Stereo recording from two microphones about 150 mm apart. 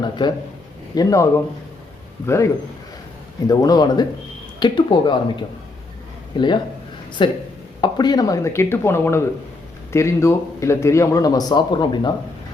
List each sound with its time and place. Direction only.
0.0 s speech: 30° left (ahead or behind)